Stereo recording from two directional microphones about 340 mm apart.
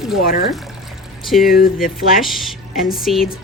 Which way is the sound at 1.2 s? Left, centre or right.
Centre.